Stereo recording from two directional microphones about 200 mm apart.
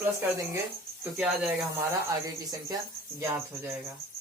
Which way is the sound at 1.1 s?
5° right (ahead or behind).